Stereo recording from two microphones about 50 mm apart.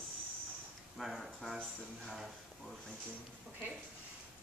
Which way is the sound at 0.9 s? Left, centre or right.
Centre.